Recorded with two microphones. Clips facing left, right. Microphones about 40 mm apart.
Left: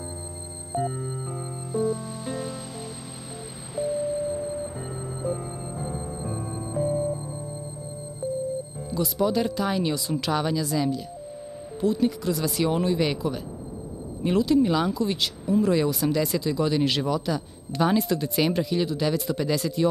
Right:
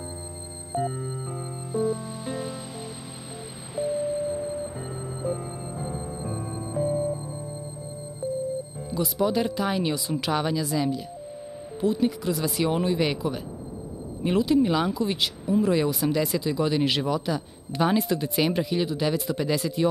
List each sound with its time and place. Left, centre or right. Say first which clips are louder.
0.7 s music: even; centre
3.7 s music: even; centre
8.9 s speech: even; centre